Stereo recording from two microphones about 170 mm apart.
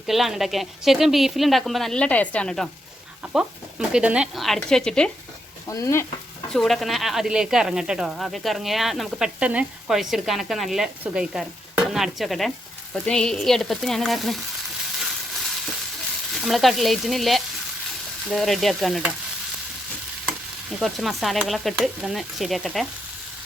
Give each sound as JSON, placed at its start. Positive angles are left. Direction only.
{"t": 0.1, "sound": "speech", "side_deg": 0}
{"t": 5.6, "sound": "frying", "side_deg": 20}
{"t": 6.5, "sound": "speech", "side_deg": 0}
{"t": 16.3, "sound": "speech", "side_deg": 0}
{"t": 20.2, "sound": "speech", "side_deg": 0}